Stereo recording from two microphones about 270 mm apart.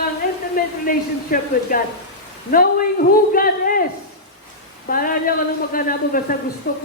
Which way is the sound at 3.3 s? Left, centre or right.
Left.